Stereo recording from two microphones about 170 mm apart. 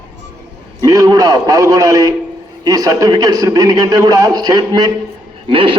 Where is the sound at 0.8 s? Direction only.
20° right (ahead or behind).